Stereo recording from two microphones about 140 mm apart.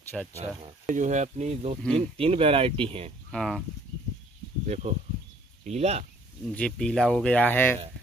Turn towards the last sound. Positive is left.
turn(degrees=15)  # may be behind; listen again after turning